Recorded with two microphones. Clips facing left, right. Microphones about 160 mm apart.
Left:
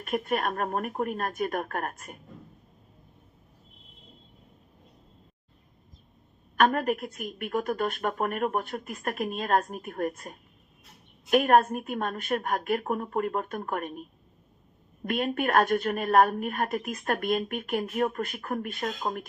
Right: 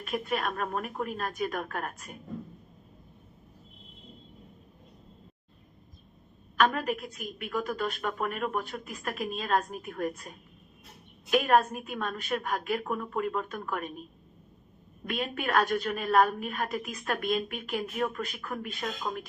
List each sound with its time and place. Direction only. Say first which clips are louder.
0.0 s a woman's voice: left 3 dB; 50° left (ahead or behind)
6.6 s a woman's voice: left 3 dB; 50° left (ahead or behind)
15.0 s a woman's voice: left 5 dB; 50° left (ahead or behind)